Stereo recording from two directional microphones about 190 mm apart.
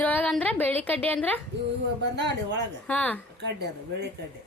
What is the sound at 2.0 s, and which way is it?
Speech, 65° right (ahead or behind).